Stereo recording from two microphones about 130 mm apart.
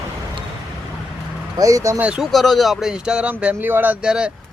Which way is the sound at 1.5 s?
25° right (ahead or behind).